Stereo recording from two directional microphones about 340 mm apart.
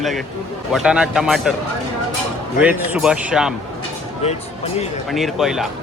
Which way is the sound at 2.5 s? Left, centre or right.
Centre.